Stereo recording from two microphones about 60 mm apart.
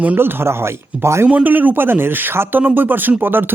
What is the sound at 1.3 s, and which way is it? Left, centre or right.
Speech, right.